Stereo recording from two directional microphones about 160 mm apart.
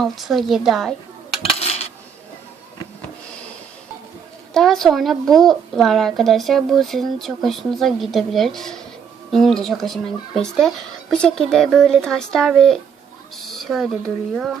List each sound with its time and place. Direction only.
0.0 s a woman's voice: centre (ahead or behind)
1.5 s coin: 40° left (ahead or behind)
4.5 s a woman's voice: centre (ahead or behind)